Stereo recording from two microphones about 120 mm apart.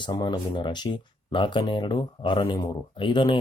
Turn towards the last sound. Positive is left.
turn(degrees=45)  # may be behind; listen again after turning